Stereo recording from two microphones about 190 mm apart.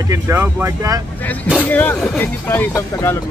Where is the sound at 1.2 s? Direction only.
10° left (ahead or behind).